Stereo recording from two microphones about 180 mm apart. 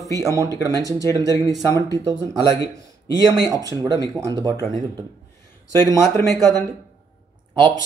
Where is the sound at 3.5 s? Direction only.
20° right (ahead or behind).